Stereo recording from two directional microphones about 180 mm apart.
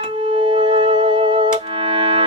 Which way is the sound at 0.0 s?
30° right (ahead or behind).